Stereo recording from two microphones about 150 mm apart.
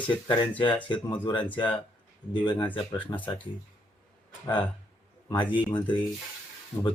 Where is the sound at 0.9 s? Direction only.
30° left (ahead or behind).